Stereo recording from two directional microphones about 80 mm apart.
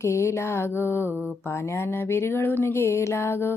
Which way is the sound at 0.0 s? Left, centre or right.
Left.